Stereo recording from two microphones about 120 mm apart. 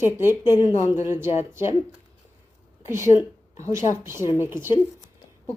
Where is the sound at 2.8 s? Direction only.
20° right (ahead or behind).